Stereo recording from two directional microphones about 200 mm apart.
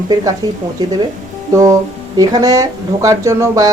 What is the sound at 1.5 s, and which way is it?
Speech, 15° right (ahead or behind).